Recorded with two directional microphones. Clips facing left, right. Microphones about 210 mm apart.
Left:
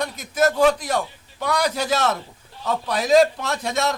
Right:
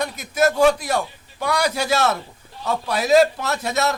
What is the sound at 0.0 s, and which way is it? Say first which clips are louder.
A man's voice: right 1 dB; 10° right (ahead or behind).